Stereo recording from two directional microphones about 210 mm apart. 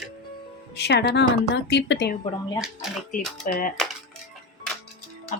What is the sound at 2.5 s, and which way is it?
Speech, centre (ahead or behind).